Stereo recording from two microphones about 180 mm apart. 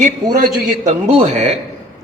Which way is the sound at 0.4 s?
40° right (ahead or behind).